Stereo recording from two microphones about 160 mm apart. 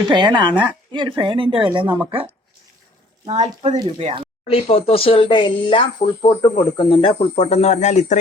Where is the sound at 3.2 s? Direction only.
45° right (ahead or behind).